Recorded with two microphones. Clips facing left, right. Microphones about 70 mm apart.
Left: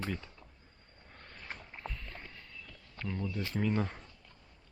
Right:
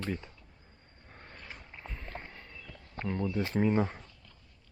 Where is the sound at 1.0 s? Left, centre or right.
Centre.